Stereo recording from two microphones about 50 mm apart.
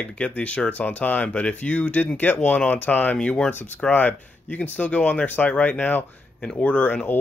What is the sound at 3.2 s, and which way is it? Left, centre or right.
Speech, left.